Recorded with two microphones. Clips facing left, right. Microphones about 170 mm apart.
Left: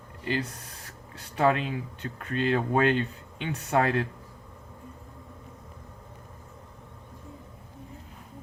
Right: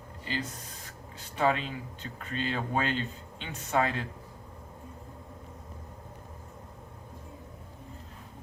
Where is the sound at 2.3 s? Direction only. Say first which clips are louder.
Left 6 dB; 60° left (ahead or behind).